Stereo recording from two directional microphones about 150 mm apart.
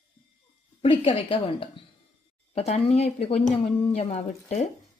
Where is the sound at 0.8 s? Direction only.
40° left (ahead or behind).